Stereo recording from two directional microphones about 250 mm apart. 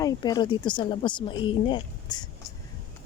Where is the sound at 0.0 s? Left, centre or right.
Centre.